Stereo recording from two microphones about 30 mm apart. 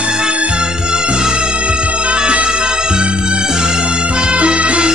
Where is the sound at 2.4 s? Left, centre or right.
Right.